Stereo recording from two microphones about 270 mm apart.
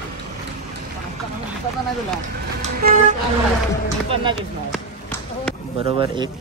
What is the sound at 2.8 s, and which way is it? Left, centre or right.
Speech, right.